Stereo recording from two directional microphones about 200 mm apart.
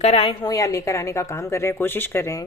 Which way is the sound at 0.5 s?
15° left (ahead or behind).